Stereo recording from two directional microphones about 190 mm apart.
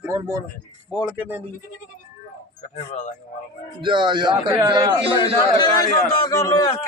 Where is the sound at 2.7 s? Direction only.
40° left (ahead or behind).